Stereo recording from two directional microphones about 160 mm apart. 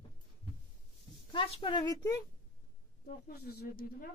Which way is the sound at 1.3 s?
35° left (ahead or behind).